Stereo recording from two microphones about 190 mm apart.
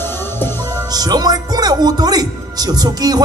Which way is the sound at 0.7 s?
20° right (ahead or behind).